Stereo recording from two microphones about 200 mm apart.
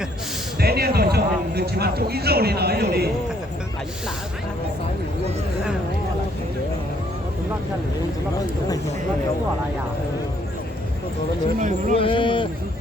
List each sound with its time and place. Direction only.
0.6 s speech: 50° right (ahead or behind)
11.6 s speech: 40° right (ahead or behind)
11.9 s speech: 25° left (ahead or behind)